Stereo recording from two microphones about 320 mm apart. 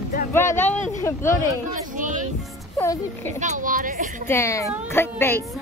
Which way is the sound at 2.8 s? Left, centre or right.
Centre.